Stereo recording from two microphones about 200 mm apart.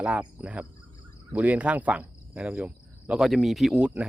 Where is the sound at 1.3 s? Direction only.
5° right (ahead or behind).